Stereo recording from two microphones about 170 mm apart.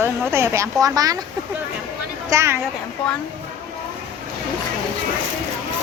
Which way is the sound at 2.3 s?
15° right (ahead or behind).